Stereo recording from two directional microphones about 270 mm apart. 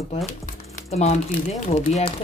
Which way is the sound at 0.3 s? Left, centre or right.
Left.